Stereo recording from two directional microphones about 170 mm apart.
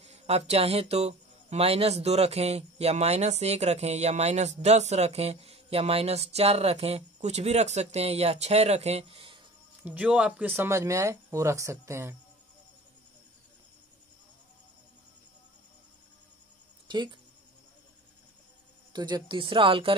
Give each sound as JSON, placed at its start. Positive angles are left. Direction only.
{"t": 0.0, "sound": "speech", "side_deg": -40}
{"t": 9.8, "sound": "speech", "side_deg": -10}
{"t": 16.8, "sound": "speech", "side_deg": -25}
{"t": 18.9, "sound": "a woman's voice", "side_deg": -25}